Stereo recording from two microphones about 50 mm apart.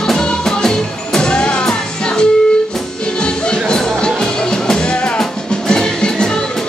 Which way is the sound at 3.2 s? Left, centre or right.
Centre.